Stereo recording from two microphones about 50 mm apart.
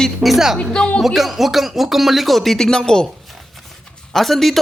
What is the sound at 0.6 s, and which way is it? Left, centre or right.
Speech, centre.